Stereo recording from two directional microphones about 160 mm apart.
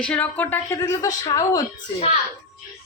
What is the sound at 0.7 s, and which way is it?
Speech, 20° left (ahead or behind).